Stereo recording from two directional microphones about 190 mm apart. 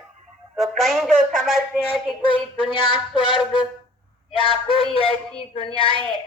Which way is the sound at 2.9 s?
25° left (ahead or behind).